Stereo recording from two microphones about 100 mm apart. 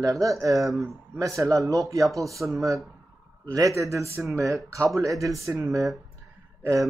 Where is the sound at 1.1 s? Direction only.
30° right (ahead or behind).